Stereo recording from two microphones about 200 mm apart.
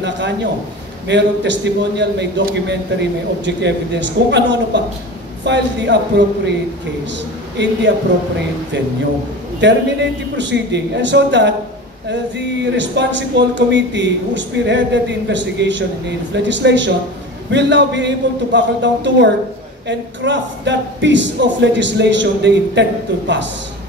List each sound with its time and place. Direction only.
0.0 s speech: 60° right (ahead or behind)
7.6 s speech: 60° right (ahead or behind)
9.6 s speech: 60° right (ahead or behind)